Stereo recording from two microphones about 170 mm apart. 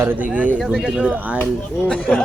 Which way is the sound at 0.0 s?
10° right (ahead or behind).